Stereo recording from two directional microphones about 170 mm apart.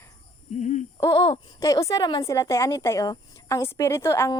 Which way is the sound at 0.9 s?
20° left (ahead or behind).